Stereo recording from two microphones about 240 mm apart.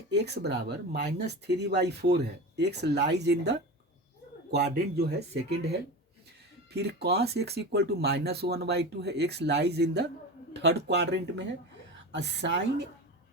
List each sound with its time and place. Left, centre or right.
0.1 s speech: right
4.5 s speech: right
6.7 s speech: right